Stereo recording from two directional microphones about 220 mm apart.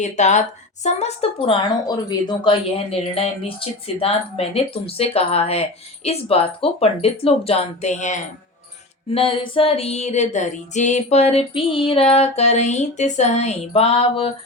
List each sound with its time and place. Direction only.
0.0 s a woman's voice: 30° left (ahead or behind)
0.9 s female singing: 30° left (ahead or behind)